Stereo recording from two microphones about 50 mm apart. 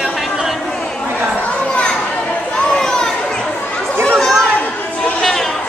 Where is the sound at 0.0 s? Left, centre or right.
Centre.